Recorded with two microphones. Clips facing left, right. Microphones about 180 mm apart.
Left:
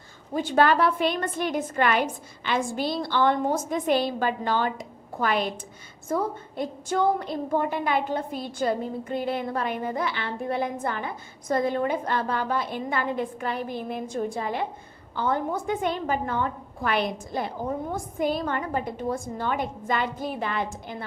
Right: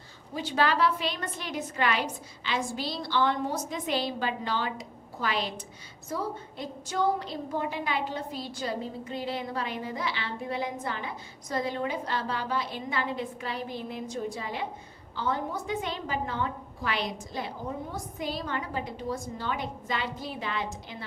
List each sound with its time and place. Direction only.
0.3 s a woman's voice: 50° left (ahead or behind)